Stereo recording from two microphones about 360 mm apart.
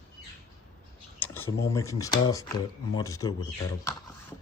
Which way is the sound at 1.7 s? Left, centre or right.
Centre.